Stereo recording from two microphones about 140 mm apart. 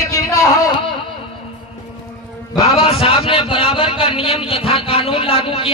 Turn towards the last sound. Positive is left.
turn(degrees=45)  # may be behind; listen again after turning